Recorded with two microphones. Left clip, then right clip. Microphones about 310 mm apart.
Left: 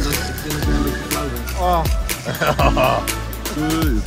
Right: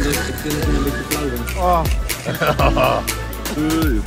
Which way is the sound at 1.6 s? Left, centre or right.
Left.